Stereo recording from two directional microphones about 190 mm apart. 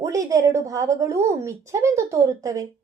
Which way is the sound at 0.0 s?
15° right (ahead or behind).